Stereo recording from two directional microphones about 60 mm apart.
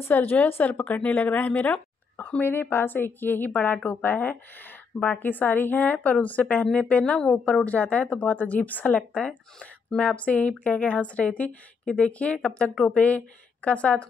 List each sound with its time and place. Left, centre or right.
0.1 s a woman's voice: left
2.4 s a woman's voice: left